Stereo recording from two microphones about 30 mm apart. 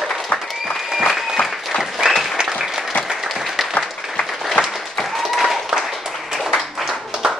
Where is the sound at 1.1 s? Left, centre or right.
Centre.